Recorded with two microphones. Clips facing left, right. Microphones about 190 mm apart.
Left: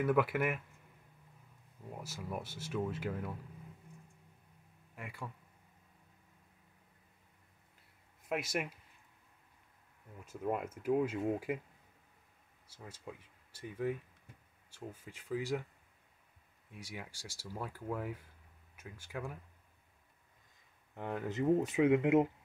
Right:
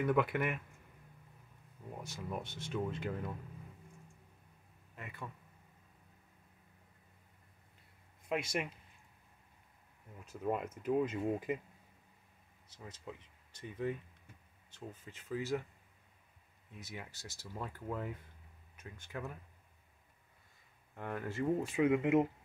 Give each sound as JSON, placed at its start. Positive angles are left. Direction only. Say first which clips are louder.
{"t": 0.0, "sound": "speech", "louder": "left 1 dB", "side_deg": 5}
{"t": 2.0, "sound": "speech", "louder": "even", "side_deg": 5}
{"t": 4.9, "sound": "speech", "louder": "left 1 dB", "side_deg": 10}
{"t": 8.3, "sound": "speech", "louder": "even", "side_deg": 5}
{"t": 10.4, "sound": "speech", "louder": "even", "side_deg": 5}
{"t": 12.6, "sound": "speech", "louder": "even", "side_deg": 10}
{"t": 16.7, "sound": "speech", "louder": "left 1 dB", "side_deg": 10}
{"t": 20.9, "sound": "speech", "louder": "left 2 dB", "side_deg": 15}